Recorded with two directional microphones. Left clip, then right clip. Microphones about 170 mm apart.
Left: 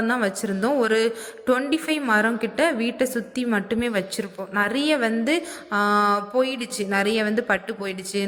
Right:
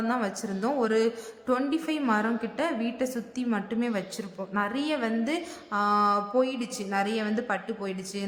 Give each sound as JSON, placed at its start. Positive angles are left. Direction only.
{"t": 0.1, "sound": "a woman's voice", "side_deg": 25}